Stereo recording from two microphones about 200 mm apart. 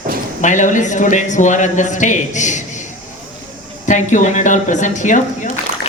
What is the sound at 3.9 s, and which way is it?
A woman's voice, 35° left (ahead or behind).